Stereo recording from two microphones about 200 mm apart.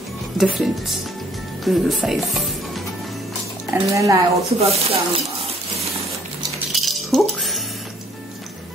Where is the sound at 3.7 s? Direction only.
15° right (ahead or behind).